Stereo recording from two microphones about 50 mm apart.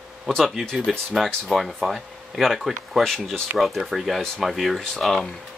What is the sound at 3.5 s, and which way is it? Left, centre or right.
Speech, centre.